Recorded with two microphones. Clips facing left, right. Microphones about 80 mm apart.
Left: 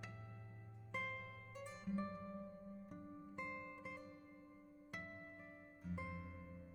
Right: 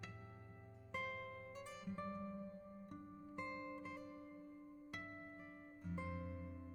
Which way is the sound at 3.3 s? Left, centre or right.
Centre.